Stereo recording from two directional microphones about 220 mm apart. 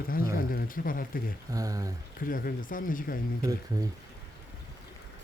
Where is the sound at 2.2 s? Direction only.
40° left (ahead or behind).